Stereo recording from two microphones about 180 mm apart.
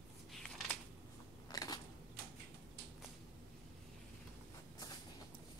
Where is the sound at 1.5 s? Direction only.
20° left (ahead or behind).